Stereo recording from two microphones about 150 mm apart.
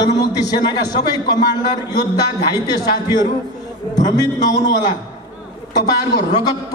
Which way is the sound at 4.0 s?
25° left (ahead or behind).